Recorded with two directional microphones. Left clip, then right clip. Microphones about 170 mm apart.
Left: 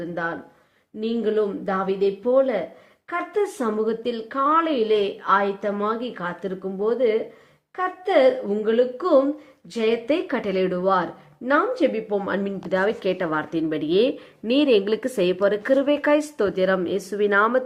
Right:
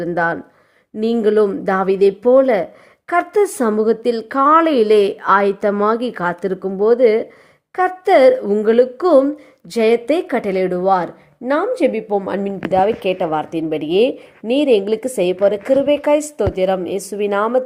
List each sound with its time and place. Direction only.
0.0 s a woman's voice: 50° right (ahead or behind); by 17.6 s 10° right (ahead or behind)